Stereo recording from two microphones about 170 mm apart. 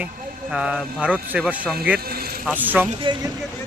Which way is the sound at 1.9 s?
65° right (ahead or behind).